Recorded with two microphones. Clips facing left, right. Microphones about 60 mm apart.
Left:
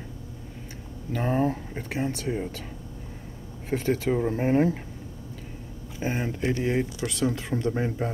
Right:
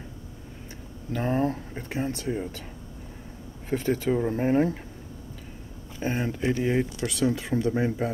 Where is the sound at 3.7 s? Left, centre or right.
Centre.